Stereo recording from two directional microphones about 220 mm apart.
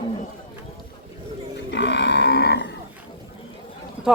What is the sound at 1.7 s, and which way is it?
Livestock, 50° left (ahead or behind).